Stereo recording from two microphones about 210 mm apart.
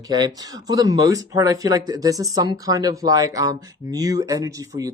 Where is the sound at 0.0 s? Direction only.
20° right (ahead or behind).